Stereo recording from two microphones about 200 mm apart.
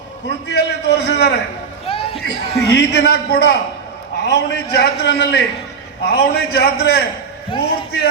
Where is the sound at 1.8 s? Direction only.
30° left (ahead or behind).